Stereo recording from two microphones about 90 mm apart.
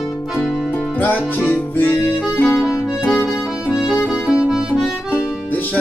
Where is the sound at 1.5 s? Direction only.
25° left (ahead or behind).